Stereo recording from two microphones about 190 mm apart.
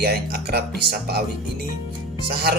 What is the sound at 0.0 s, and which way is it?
Speech, 55° right (ahead or behind).